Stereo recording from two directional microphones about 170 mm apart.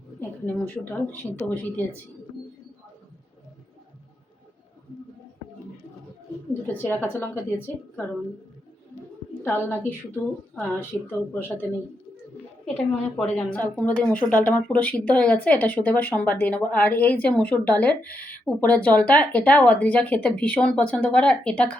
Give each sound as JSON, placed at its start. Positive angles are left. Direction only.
{"t": 0.2, "sound": "a woman's voice", "side_deg": 10}
{"t": 6.8, "sound": "a woman's voice", "side_deg": 10}
{"t": 9.4, "sound": "a woman's voice", "side_deg": 10}
{"t": 10.8, "sound": "a woman's voice", "side_deg": -10}
{"t": 12.6, "sound": "a woman's voice", "side_deg": 5}